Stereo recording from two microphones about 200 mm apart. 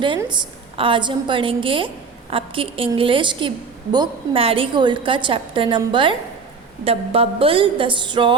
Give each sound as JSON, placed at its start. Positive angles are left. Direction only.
{"t": 0.2, "sound": "a woman's voice", "side_deg": -20}